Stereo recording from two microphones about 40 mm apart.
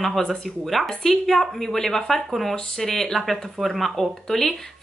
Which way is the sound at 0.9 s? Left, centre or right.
Centre.